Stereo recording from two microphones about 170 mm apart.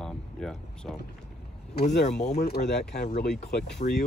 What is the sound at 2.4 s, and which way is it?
Speech, 75° left (ahead or behind).